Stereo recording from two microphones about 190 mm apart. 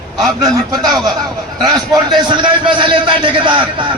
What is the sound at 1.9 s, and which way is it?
A man's voice, 25° right (ahead or behind).